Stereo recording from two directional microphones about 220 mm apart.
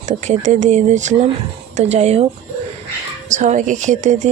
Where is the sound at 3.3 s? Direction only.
35° right (ahead or behind).